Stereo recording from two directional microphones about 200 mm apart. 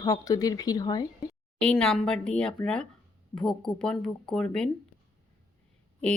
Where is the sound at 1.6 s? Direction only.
5° left (ahead or behind).